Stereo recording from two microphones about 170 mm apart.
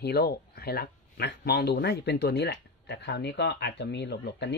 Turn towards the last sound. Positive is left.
turn(degrees=85)